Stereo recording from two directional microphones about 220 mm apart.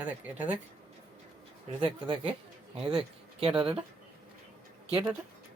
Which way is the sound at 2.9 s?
25° right (ahead or behind).